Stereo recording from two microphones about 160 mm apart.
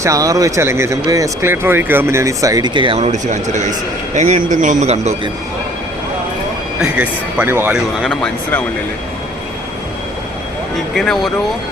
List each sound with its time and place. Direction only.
0.0 s speech: 20° right (ahead or behind); by 5.1 s 45° right (ahead or behind)
6.9 s speech: 10° right (ahead or behind)
8.0 s speech: 5° left (ahead or behind)
10.9 s speech: centre (ahead or behind)